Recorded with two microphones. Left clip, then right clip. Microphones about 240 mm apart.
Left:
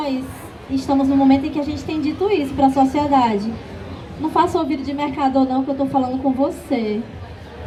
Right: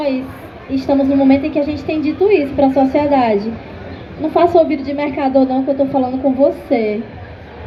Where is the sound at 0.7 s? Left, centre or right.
Left.